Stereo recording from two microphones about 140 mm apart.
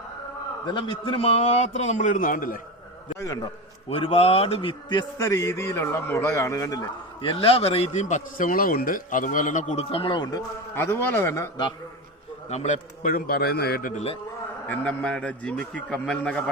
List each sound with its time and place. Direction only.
0.6 s a man's voice: 35° left (ahead or behind); by 2.6 s 75° left (ahead or behind)
3.8 s a man's voice: 45° left (ahead or behind)
4.9 s a man's voice: 25° left (ahead or behind)
7.2 s speech: 40° left (ahead or behind)
8.0 s a man's voice: 65° left (ahead or behind); by 10.4 s 35° left (ahead or behind)
10.8 s a man's voice: 15° left (ahead or behind)
12.5 s a man's voice: 55° left (ahead or behind); by 14.0 s 85° left
14.7 s a man's voice: 10° left (ahead or behind)